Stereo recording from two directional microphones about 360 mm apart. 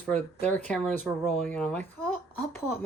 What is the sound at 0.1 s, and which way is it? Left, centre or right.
Speech, centre.